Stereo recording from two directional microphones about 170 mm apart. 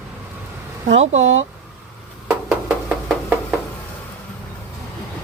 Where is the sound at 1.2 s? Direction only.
90° right.